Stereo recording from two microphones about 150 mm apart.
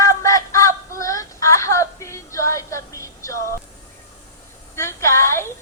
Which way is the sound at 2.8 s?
20° left (ahead or behind).